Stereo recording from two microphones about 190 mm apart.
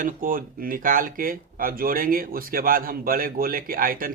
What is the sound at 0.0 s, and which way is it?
Speech, 45° right (ahead or behind).